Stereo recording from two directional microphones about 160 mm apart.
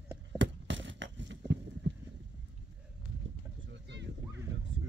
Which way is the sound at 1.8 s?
90° right.